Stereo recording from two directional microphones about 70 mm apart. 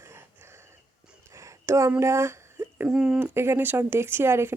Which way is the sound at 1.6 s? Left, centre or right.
Right.